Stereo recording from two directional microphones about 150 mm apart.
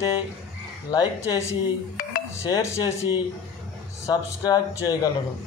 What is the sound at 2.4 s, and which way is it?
Speech, 20° left (ahead or behind).